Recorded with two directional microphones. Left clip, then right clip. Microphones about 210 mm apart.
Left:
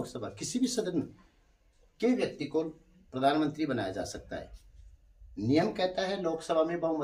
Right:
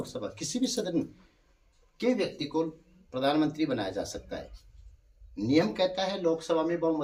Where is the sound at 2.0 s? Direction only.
10° left (ahead or behind).